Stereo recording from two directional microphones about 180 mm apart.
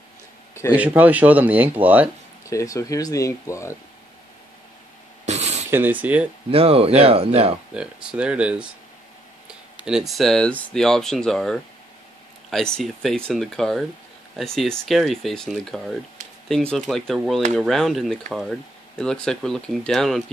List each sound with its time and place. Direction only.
0.7 s speech: 10° right (ahead or behind)
2.4 s speech: 15° left (ahead or behind)
5.2 s a sound: 40° right (ahead or behind)
5.7 s speech: 10° right (ahead or behind)
6.5 s speech: 30° right (ahead or behind)
7.7 s speech: 5° right (ahead or behind)
9.8 s speech: centre (ahead or behind)